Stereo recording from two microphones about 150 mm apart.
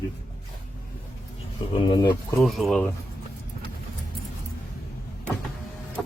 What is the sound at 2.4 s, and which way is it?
Speech, centre (ahead or behind).